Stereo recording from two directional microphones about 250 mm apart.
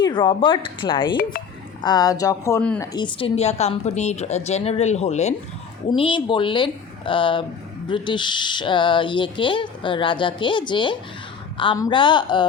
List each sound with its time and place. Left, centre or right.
0.0 s speech: centre